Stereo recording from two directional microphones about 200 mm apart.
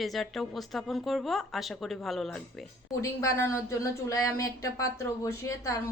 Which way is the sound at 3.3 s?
15° left (ahead or behind).